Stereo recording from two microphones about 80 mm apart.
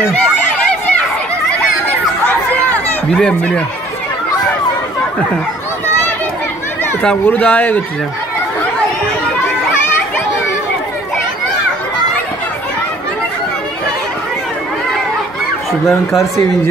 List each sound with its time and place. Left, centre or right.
3.2 s speech: centre
7.2 s speech: centre